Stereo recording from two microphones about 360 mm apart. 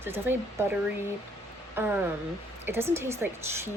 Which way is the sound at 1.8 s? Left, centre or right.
Centre.